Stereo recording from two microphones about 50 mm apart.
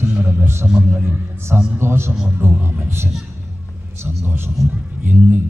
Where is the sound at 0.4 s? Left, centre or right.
Right.